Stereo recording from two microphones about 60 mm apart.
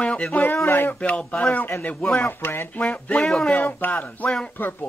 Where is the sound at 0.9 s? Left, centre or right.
Centre.